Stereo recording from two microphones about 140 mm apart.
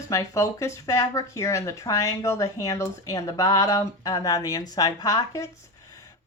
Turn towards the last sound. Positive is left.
turn(degrees=25)  # may be behind; listen again after turning